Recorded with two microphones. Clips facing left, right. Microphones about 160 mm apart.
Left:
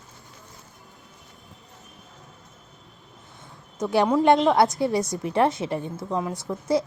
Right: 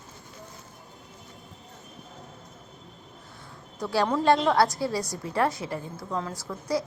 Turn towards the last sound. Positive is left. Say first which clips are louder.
# left 5 dB
turn(degrees=20)  # may be behind; listen again after turning